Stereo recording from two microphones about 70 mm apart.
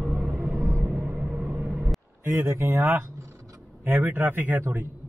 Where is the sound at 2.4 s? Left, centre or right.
Right.